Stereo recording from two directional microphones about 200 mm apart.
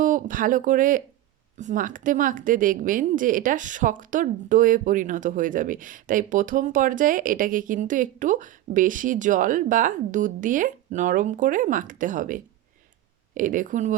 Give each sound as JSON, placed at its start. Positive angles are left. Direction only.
{"t": 0.0, "sound": "speech", "side_deg": -40}